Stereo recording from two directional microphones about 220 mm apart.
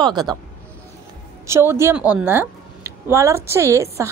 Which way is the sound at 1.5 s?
10° right (ahead or behind).